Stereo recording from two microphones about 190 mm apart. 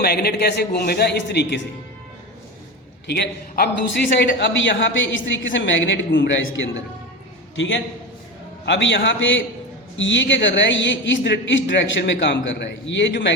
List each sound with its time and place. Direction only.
0.0 s a man's voice: 55° left (ahead or behind)
3.1 s a man's voice: 55° left (ahead or behind)
4.1 s a man's voice: 70° left (ahead or behind)